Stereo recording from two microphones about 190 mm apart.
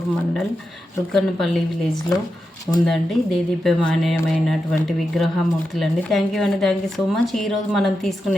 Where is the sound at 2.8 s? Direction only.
Centre (ahead or behind).